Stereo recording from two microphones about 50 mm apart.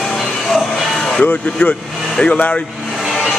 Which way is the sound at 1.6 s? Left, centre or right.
Left.